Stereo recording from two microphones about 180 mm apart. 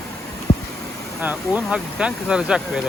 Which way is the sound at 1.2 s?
10° right (ahead or behind).